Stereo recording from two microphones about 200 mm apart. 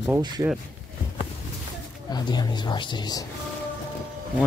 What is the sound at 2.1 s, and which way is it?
Speech, 20° left (ahead or behind).